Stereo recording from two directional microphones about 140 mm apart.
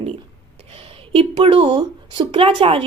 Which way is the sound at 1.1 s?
45° right (ahead or behind).